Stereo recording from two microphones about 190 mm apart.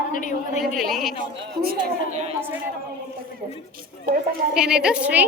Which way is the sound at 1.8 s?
40° right (ahead or behind).